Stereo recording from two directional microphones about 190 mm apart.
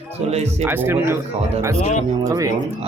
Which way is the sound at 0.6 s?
10° right (ahead or behind).